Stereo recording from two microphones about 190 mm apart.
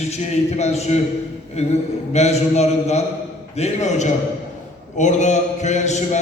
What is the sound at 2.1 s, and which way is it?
A man's voice, 35° left (ahead or behind).